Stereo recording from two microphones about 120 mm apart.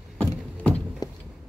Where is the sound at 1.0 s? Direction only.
35° left (ahead or behind).